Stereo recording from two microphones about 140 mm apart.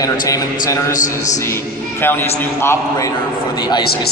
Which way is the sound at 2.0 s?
15° left (ahead or behind).